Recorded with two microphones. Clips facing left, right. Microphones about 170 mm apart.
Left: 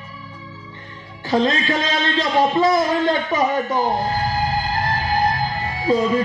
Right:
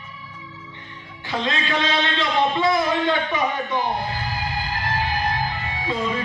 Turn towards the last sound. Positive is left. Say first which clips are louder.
# left 7 dB
turn(degrees=40)  # may be behind; listen again after turning